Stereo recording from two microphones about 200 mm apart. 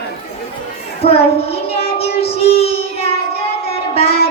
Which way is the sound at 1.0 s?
30° left (ahead or behind).